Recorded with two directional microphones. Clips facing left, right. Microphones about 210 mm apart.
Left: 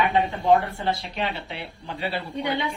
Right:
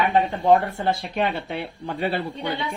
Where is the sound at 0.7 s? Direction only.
50° right (ahead or behind).